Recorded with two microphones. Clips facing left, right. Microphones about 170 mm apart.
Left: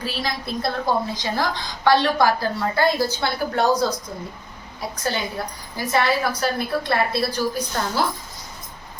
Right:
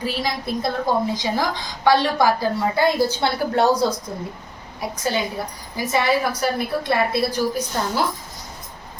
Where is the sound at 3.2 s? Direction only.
30° right (ahead or behind).